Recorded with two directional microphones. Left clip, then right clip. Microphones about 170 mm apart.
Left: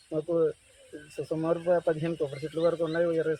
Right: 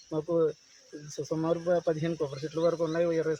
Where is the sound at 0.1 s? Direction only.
10° right (ahead or behind).